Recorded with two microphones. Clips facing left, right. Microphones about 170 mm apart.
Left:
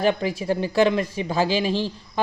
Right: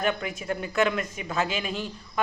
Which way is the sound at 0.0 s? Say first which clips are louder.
Left 6 dB; 30° left (ahead or behind).